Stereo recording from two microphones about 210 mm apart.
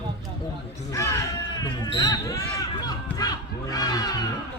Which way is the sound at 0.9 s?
15° left (ahead or behind).